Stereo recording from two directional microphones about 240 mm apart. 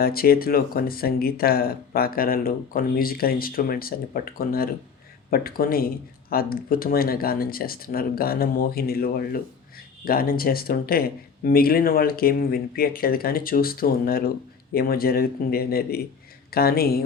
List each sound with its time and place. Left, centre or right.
0.0 s speech: left